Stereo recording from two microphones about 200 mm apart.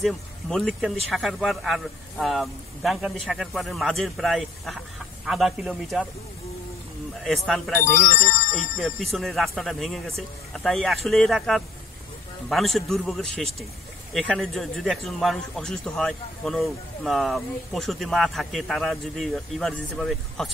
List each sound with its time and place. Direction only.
0.0 s a man's voice: centre (ahead or behind)
7.4 s a man's voice: centre (ahead or behind)
7.8 s speech: 40° left (ahead or behind)
8.7 s a man's voice: centre (ahead or behind)